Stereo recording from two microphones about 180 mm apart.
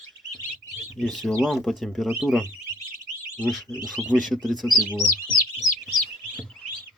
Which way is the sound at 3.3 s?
5° left (ahead or behind).